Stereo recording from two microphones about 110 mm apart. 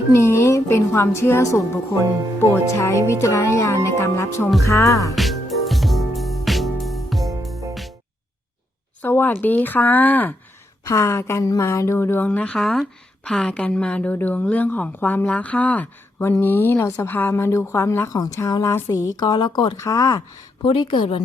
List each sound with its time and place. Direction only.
0.1 s speech: 25° left (ahead or behind)
5.1 s music: centre (ahead or behind)
9.0 s speech: 20° left (ahead or behind)
10.8 s a woman's voice: 25° left (ahead or behind); by 19.7 s 45° left (ahead or behind)
19.7 s speech: 30° left (ahead or behind)
20.7 s speech: 55° left (ahead or behind)